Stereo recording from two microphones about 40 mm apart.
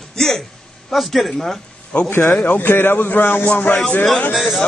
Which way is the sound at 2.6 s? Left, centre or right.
Left.